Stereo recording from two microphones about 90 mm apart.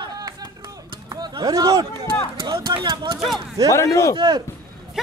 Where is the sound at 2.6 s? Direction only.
60° right (ahead or behind).